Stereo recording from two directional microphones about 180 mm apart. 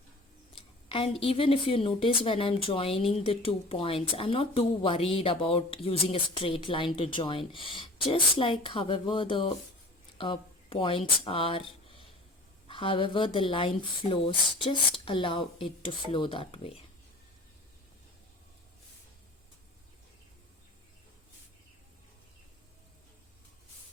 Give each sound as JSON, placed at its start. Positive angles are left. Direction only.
{"t": 0.9, "sound": "a woman's voice", "side_deg": 30}